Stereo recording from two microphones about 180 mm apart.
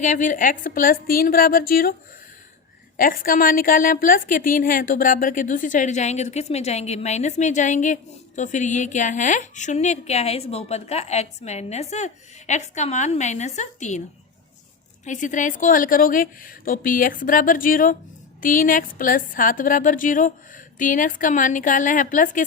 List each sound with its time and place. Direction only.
0.0 s a woman's voice: 45° left (ahead or behind)
3.0 s a woman's voice: 50° left (ahead or behind)
15.0 s a woman's voice: 45° left (ahead or behind)